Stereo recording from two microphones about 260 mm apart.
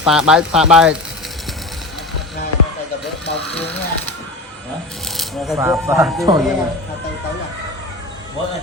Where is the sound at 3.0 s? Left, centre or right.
Left.